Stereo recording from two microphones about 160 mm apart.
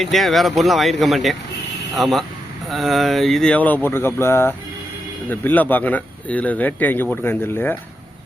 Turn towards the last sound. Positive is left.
turn(degrees=15)  # may be behind; listen again after turning